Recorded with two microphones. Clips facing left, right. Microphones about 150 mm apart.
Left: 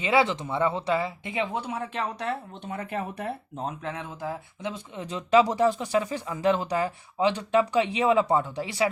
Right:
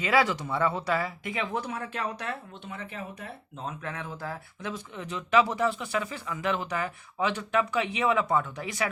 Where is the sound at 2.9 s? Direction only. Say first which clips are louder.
Left 8 dB; 65° left (ahead or behind).